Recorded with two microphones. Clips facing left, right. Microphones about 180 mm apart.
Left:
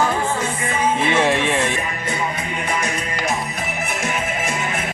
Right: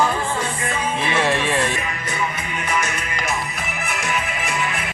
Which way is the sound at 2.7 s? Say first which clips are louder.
Right 1 dB; 35° left (ahead or behind).